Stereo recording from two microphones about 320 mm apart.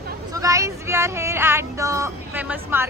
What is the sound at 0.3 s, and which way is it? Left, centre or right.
Speech, centre.